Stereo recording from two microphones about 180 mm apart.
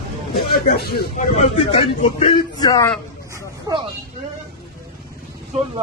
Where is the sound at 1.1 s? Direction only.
40° left (ahead or behind).